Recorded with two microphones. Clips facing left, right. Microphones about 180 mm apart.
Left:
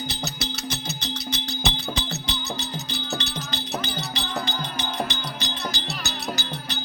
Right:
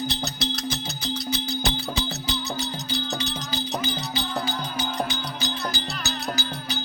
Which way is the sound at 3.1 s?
5° right (ahead or behind).